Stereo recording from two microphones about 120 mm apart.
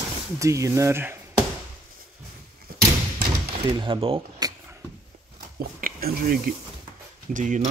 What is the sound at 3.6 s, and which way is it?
Speech, 40° right (ahead or behind).